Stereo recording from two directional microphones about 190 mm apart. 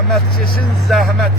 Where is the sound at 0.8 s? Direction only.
Centre (ahead or behind).